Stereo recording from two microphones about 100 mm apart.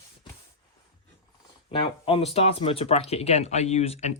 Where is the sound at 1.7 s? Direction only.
55° left (ahead or behind); by 4.0 s 90° left.